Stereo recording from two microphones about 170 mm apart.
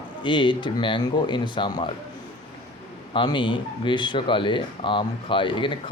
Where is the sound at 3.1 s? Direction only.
30° left (ahead or behind).